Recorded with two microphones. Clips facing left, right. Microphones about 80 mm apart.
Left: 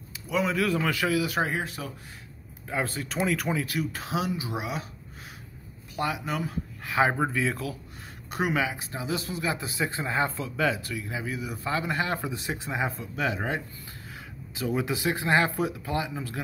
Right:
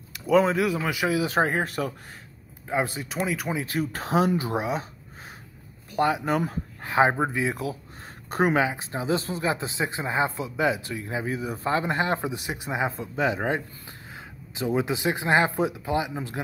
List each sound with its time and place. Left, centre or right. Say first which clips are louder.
0.3 s speech: right 7 dB; right
0.6 s a man's voice: right 1 dB; centre
1.0 s speech: right 7 dB; right
2.7 s speech: right 3 dB; centre
3.3 s speech: left 3 dB; centre
3.5 s speech: right 1 dB; right
3.8 s speech: right 6 dB; right
4.6 s speech: right 5 dB; right
5.9 s speech: right 6 dB; right
7.1 s speech: right 2 dB; right
8.3 s speech: right 5 dB; right